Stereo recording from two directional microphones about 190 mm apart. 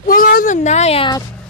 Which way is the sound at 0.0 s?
50° left (ahead or behind).